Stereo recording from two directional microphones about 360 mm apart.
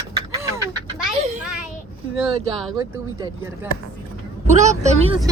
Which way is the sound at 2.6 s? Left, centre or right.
Centre.